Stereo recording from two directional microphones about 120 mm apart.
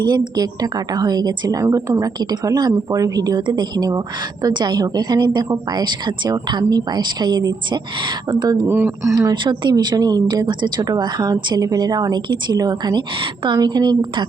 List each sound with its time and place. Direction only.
0.0 s speech: 35° right (ahead or behind)
8.6 s speech: 20° right (ahead or behind)
9.3 s speech: 40° right (ahead or behind)